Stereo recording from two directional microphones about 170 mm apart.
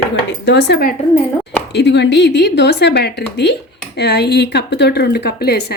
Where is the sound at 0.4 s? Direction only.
85° left.